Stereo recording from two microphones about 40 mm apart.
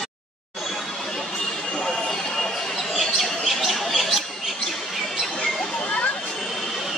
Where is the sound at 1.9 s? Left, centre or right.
Centre.